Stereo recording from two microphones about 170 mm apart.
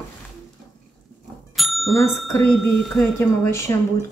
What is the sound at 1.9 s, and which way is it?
Speech, 15° left (ahead or behind).